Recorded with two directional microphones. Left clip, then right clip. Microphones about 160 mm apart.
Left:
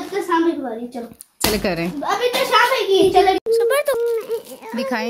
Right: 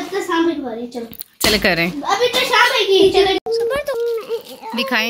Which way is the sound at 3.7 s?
85° left.